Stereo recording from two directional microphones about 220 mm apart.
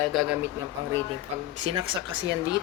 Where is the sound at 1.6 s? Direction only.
25° right (ahead or behind).